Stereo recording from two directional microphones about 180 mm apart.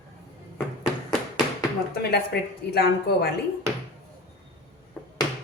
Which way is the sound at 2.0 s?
65° left (ahead or behind).